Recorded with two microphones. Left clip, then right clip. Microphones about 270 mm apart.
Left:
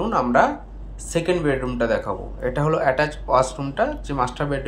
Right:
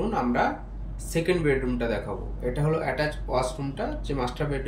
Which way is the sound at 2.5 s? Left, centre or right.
Centre.